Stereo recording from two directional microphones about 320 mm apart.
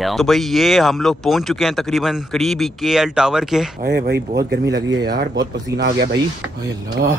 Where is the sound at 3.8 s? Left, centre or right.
Right.